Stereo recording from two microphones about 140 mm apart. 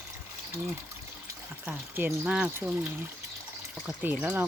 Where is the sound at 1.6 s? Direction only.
15° right (ahead or behind).